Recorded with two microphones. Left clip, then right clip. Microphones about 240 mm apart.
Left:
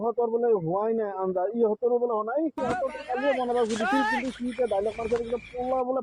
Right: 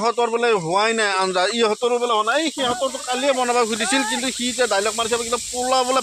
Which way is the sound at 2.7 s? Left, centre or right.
Centre.